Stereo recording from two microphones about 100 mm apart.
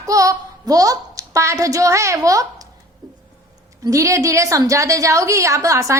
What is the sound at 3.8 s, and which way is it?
A woman's voice, 30° right (ahead or behind).